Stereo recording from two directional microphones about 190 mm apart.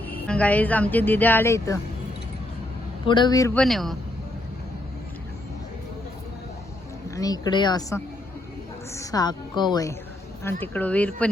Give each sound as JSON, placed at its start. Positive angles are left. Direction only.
{"t": 0.0, "sound": "a woman's voice", "side_deg": 10}
{"t": 3.1, "sound": "a woman's voice", "side_deg": 25}
{"t": 3.6, "sound": "speech", "side_deg": 0}
{"t": 7.2, "sound": "a woman's voice", "side_deg": 20}
{"t": 10.4, "sound": "a woman's voice", "side_deg": 10}